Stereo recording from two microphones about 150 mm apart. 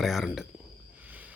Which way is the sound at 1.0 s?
10° right (ahead or behind).